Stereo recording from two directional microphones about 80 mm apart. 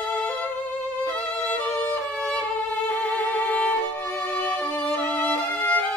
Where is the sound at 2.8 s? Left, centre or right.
Centre.